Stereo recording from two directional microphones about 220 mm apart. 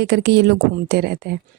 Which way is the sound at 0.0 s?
45° right (ahead or behind).